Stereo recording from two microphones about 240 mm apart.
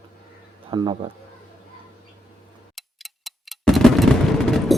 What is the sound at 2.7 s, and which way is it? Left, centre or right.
Tick-tock, centre.